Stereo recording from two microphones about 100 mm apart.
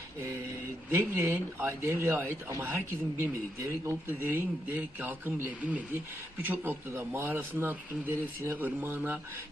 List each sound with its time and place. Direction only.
0.9 s speech: 20° right (ahead or behind)